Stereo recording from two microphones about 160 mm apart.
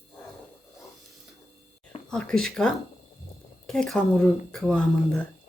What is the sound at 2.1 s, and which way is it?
Speech, 5° left (ahead or behind).